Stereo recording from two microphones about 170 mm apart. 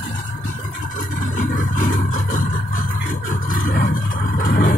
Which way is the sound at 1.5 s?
50° left (ahead or behind).